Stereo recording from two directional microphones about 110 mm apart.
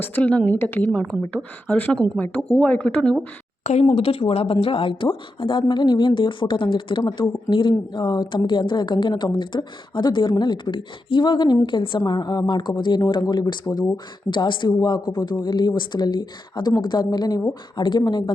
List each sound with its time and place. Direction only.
0.0 s a woman's voice: 15° left (ahead or behind)
3.6 s a woman's voice: 90° left; by 18.3 s 40° left (ahead or behind)